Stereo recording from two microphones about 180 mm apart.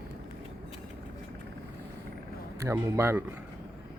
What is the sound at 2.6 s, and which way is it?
Speech, 15° right (ahead or behind).